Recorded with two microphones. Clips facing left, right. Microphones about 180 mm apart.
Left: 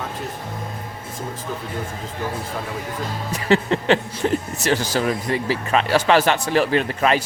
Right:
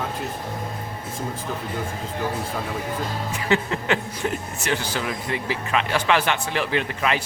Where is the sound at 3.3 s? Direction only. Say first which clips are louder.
Left 5 dB; 35° left (ahead or behind).